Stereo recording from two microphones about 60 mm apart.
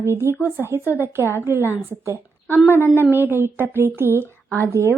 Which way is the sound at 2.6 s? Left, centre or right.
Left.